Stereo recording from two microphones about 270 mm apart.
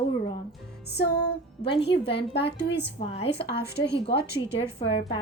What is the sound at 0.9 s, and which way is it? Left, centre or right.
Speech, left.